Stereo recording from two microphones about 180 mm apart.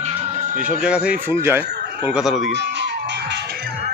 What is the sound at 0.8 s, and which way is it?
Speech, 5° right (ahead or behind).